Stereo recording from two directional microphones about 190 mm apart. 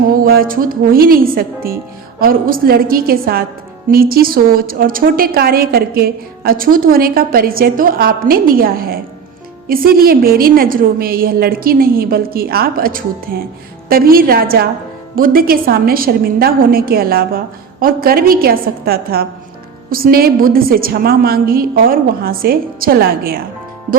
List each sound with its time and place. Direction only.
0.1 s a woman's voice: 50° right (ahead or behind)